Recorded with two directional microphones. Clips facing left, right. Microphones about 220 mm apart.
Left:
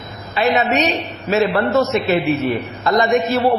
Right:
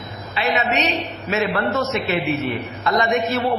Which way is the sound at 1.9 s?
40° left (ahead or behind).